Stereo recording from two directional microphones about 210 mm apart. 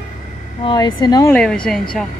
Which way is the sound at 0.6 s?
20° left (ahead or behind).